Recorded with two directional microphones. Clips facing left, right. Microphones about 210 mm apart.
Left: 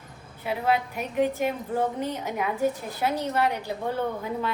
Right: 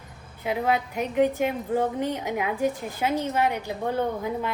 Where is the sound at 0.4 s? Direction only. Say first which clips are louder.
Right 1 dB; 15° right (ahead or behind).